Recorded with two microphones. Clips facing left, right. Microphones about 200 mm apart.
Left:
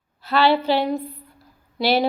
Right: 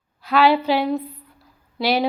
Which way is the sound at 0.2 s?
10° right (ahead or behind).